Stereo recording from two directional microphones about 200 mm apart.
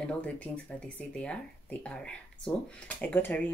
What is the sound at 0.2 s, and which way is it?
Speech, 5° left (ahead or behind).